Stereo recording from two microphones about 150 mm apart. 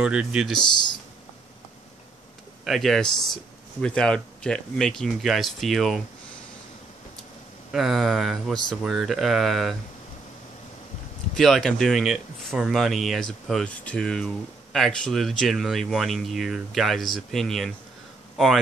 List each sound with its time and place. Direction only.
0.0 s speech: 5° right (ahead or behind)
0.6 s speech: 30° left (ahead or behind)
2.6 s speech: centre (ahead or behind)
7.7 s speech: centre (ahead or behind)
11.3 s speech: centre (ahead or behind)